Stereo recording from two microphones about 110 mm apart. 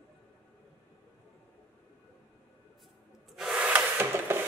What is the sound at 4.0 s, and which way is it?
Wood, 20° right (ahead or behind).